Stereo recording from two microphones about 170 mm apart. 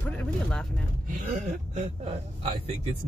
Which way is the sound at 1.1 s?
50° right (ahead or behind).